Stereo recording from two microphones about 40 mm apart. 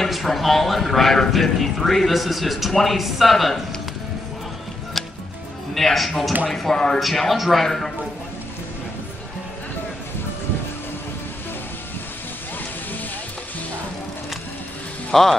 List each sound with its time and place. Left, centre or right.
0.1 s a man's voice: centre
5.8 s a man's voice: centre
6.5 s a man's voice: centre
7.0 s a man's voice: centre
7.6 s a man's voice: centre
15.1 s a man's voice: centre